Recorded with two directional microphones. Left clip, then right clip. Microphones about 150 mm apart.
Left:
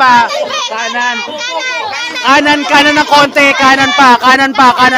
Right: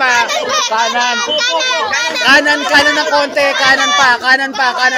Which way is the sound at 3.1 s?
60° left (ahead or behind).